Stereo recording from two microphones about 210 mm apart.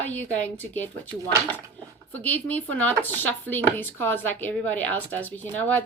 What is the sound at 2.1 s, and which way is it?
Speech, 10° left (ahead or behind).